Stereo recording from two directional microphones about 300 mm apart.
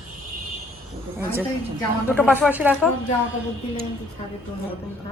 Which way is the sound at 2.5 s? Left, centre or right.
Centre.